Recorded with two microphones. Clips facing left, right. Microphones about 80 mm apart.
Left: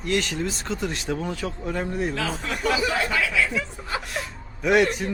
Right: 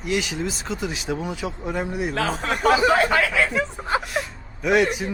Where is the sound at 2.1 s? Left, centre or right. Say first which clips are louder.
Right 4 dB; right.